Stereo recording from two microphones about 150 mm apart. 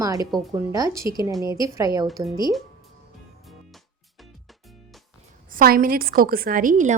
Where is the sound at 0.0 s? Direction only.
20° right (ahead or behind).